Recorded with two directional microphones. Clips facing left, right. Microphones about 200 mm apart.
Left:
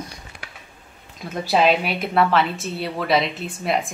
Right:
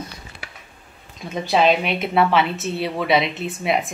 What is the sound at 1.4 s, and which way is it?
A woman's voice, 5° left (ahead or behind).